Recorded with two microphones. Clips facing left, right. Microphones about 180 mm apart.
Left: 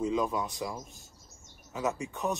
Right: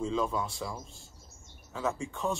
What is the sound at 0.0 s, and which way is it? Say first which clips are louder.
A man's voice: left 1 dB; 15° left (ahead or behind).